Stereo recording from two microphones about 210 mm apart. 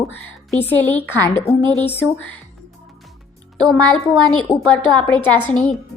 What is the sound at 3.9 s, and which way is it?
A woman's voice, 5° left (ahead or behind).